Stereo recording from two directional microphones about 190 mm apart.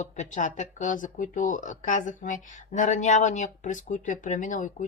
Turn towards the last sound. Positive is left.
turn(degrees=40)  # may be behind; listen again after turning